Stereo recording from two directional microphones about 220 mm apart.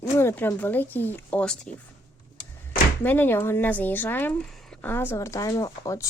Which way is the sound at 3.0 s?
10° left (ahead or behind).